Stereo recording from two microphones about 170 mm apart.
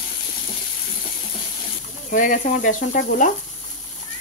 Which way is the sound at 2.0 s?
50° left (ahead or behind).